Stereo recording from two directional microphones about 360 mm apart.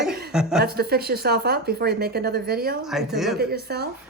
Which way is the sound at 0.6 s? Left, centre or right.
Right.